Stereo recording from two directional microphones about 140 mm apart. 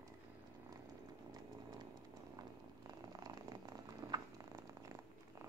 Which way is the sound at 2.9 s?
25° right (ahead or behind).